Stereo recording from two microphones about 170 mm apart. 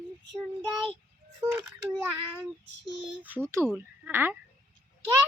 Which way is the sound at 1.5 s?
10° right (ahead or behind).